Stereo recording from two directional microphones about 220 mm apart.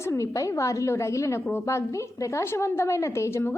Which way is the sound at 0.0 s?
15° left (ahead or behind).